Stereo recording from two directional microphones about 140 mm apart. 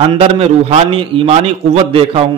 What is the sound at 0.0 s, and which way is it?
A man's voice, 45° right (ahead or behind).